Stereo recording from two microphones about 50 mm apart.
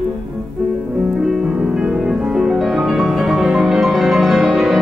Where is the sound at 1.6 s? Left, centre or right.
Centre.